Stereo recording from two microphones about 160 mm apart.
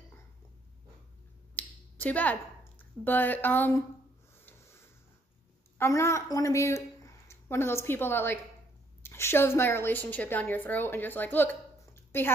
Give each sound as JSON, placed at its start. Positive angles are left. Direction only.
{"t": 1.5, "sound": "finger snapping", "side_deg": 10}
{"t": 4.5, "sound": "a sound", "side_deg": 15}
{"t": 5.8, "sound": "a woman's voice", "side_deg": 15}